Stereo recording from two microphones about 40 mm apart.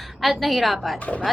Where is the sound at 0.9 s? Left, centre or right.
Left.